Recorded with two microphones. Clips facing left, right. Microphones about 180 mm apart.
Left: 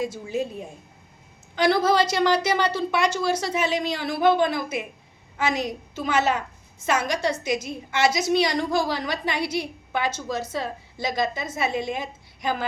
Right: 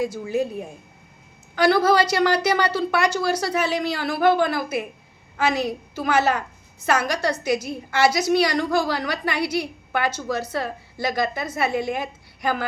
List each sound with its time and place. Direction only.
0.0 s a woman's voice: 20° left (ahead or behind)